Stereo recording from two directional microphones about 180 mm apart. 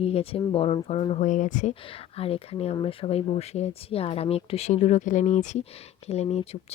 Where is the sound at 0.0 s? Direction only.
35° left (ahead or behind).